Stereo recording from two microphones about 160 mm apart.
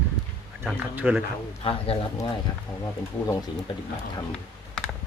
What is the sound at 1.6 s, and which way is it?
Speech, 35° left (ahead or behind).